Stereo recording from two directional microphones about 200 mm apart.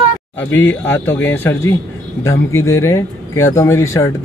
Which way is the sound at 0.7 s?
10° left (ahead or behind).